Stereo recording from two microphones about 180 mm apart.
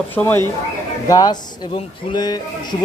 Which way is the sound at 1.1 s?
25° left (ahead or behind).